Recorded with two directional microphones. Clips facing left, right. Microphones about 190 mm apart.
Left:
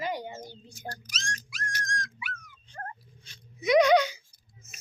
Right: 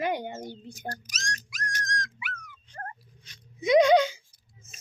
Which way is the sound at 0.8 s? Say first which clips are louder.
Right 2 dB; 40° right (ahead or behind).